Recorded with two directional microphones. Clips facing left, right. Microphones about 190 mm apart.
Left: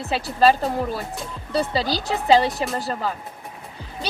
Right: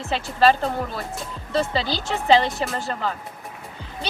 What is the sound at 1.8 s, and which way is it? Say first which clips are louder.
Speech: left 2 dB; 35° left (ahead or behind).